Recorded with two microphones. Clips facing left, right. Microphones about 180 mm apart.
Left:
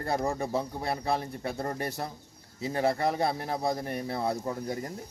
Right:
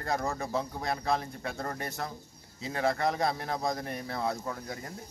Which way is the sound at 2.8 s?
30° left (ahead or behind).